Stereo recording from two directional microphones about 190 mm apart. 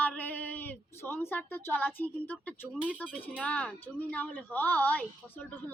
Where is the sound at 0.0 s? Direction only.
10° left (ahead or behind).